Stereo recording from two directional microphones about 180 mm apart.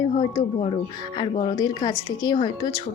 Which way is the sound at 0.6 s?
30° left (ahead or behind).